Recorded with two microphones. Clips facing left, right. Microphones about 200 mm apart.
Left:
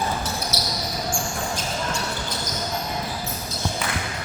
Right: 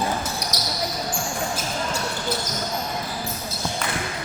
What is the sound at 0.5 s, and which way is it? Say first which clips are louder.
Basketball bounce: left 1 dB; 15° right (ahead or behind).